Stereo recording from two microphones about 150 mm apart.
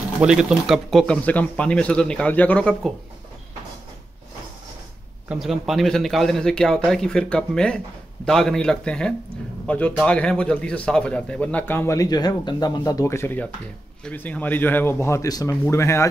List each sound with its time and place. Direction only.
0.2 s speech: 5° right (ahead or behind)
5.3 s a man's voice: centre (ahead or behind); by 16.1 s 20° left (ahead or behind)